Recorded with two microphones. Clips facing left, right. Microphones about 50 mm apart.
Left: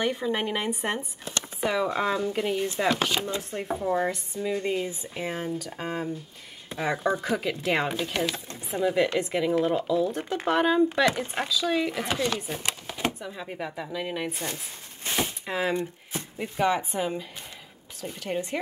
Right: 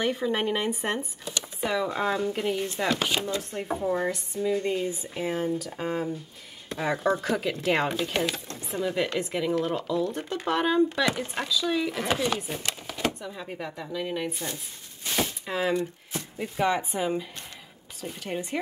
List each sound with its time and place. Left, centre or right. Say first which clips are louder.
0.0 s a woman's voice: right 1 dB; centre
2.0 s speech: even; centre
3.8 s a woman's voice: left 1 dB; centre
12.1 s speech: right 4 dB; centre
12.4 s a woman's voice: left 1 dB; centre
15.1 s a sound: even; centre
15.7 s speech: right 1 dB; left
16.5 s speech: left 1 dB; centre